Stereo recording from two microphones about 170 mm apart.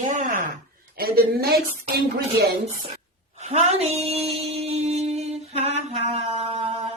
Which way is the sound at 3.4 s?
35° right (ahead or behind).